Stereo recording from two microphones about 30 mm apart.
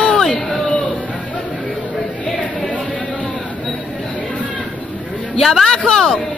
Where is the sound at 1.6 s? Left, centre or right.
Centre.